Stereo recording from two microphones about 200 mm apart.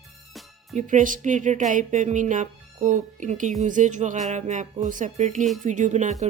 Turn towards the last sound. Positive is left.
turn(degrees=-40)  # may be behind; listen again after turning